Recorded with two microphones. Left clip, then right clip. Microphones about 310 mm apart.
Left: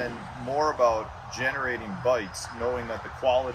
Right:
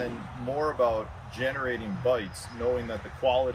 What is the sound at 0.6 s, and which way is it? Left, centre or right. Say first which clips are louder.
Speech: left 3 dB; centre.